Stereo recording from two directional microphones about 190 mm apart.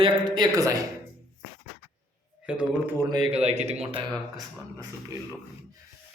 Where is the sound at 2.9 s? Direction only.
20° right (ahead or behind).